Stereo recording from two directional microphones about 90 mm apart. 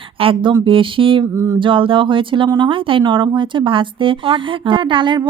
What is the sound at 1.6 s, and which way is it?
A woman's voice, 70° right (ahead or behind).